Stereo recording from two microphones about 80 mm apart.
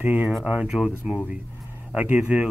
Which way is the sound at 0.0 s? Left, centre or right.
Centre.